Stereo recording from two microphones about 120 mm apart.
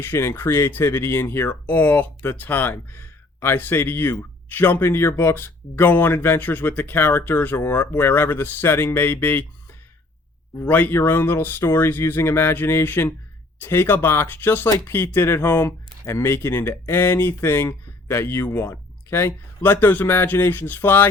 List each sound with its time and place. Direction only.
0.0 s speech: 20° left (ahead or behind)
10.6 s speech: 15° left (ahead or behind)